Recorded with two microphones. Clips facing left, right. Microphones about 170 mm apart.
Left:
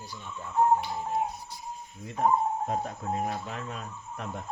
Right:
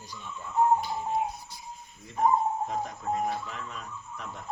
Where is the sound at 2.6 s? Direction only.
55° left (ahead or behind).